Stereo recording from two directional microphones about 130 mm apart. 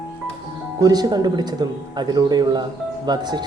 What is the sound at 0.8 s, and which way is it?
Speech, 30° right (ahead or behind).